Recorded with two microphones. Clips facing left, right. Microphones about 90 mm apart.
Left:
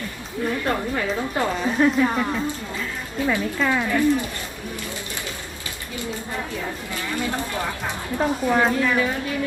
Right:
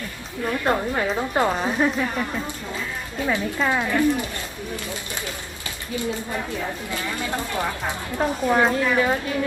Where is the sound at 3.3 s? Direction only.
20° right (ahead or behind).